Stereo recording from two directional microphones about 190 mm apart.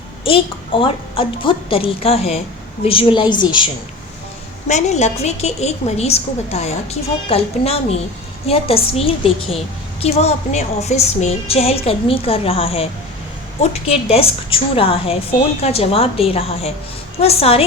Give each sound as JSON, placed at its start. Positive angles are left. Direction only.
{"t": 0.3, "sound": "a woman's voice", "side_deg": 30}
{"t": 4.7, "sound": "a woman's voice", "side_deg": 35}